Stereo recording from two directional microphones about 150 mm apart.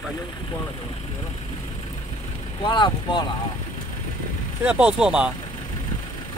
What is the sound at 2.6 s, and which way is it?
Speech, 30° left (ahead or behind).